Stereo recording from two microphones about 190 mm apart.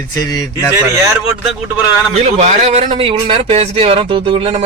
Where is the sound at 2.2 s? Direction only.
35° right (ahead or behind).